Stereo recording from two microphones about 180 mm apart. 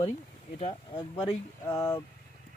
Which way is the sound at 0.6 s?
30° left (ahead or behind).